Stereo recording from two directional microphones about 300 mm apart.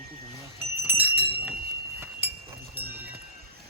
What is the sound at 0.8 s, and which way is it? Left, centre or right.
Speech, centre.